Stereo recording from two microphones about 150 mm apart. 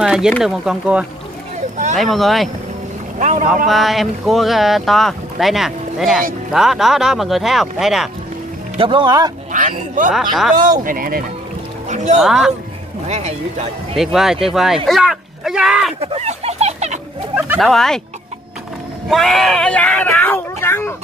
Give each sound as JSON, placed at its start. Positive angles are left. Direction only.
{"t": 0.0, "sound": "speech", "side_deg": -5}
{"t": 3.2, "sound": "boat", "side_deg": -50}
{"t": 3.6, "sound": "speech", "side_deg": 0}
{"t": 8.7, "sound": "speech", "side_deg": -35}
{"t": 9.5, "sound": "speech", "side_deg": -60}
{"t": 10.1, "sound": "speech", "side_deg": 0}
{"t": 10.8, "sound": "speech", "side_deg": -70}
{"t": 11.9, "sound": "speech", "side_deg": -50}
{"t": 12.2, "sound": "speech", "side_deg": -5}
{"t": 13.1, "sound": "speech", "side_deg": -50}
{"t": 13.9, "sound": "speech", "side_deg": 0}
{"t": 16.0, "sound": "a sound", "side_deg": -45}
{"t": 17.6, "sound": "speech", "side_deg": 5}
{"t": 19.0, "sound": "speech", "side_deg": 0}